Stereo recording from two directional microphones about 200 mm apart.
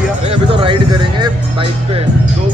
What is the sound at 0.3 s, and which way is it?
Speech, 25° right (ahead or behind).